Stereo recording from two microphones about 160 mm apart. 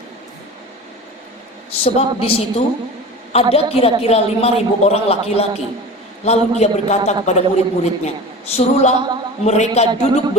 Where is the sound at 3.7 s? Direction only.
40° left (ahead or behind).